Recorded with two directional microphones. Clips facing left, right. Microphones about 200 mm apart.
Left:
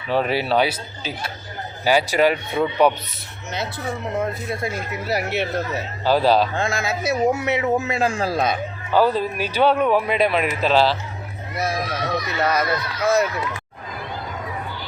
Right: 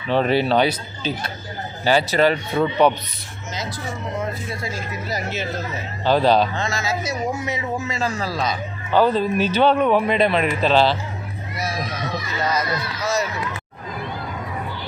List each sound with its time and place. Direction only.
0.1 s speech: 5° left (ahead or behind)
4.2 s a man's voice: 60° left (ahead or behind)
6.1 s speech: 5° left (ahead or behind)
6.5 s a man's voice: 55° left (ahead or behind)
8.9 s speech: 5° left (ahead or behind)
11.5 s a man's voice: 55° left (ahead or behind)